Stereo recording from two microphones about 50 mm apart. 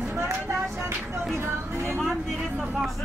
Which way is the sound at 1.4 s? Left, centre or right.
Right.